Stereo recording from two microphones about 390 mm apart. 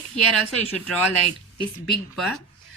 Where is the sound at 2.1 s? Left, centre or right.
Centre.